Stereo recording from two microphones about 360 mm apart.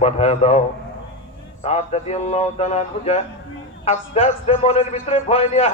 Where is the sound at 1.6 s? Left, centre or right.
Centre.